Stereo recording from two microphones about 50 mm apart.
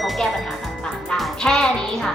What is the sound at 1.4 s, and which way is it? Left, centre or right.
Speech, centre.